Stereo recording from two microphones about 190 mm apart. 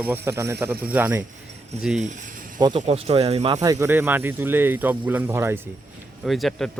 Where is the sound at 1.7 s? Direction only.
35° right (ahead or behind).